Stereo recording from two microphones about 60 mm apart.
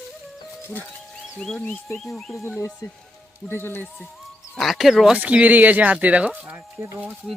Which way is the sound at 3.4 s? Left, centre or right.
Left.